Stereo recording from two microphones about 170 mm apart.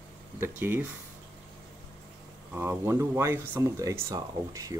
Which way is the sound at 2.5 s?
15° right (ahead or behind).